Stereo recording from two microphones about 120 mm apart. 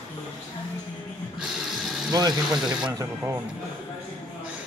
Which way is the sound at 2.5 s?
5° right (ahead or behind).